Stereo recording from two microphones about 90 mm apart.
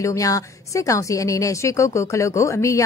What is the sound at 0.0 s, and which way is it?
A woman's voice, 35° left (ahead or behind).